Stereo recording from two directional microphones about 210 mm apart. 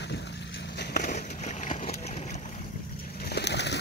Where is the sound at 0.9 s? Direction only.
40° left (ahead or behind).